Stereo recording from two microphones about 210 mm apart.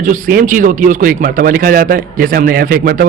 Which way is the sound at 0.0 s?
40° right (ahead or behind).